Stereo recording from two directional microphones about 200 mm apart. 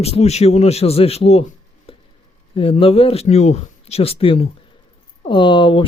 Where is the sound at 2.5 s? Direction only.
25° left (ahead or behind).